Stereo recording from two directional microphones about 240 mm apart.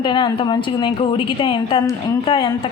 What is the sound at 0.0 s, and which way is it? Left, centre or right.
A woman's voice, centre.